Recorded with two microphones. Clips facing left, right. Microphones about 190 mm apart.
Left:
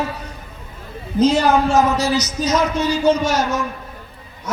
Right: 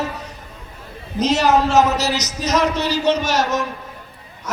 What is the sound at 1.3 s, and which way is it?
A man's voice, 80° right.